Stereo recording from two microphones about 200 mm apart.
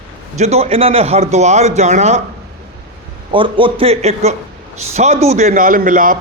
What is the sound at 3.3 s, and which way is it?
A man's voice, 25° right (ahead or behind).